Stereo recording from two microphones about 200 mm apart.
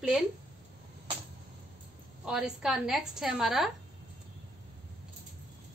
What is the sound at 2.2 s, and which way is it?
A woman's voice, 5° right (ahead or behind).